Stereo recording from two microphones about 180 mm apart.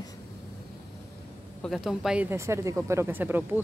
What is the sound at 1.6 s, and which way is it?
Speech, centre (ahead or behind).